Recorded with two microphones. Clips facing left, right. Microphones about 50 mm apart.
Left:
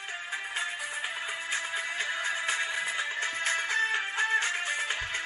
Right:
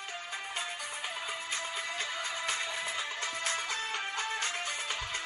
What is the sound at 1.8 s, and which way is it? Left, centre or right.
Music, left.